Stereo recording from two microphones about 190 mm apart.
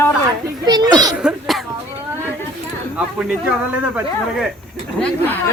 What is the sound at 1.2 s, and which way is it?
Speech, centre (ahead or behind).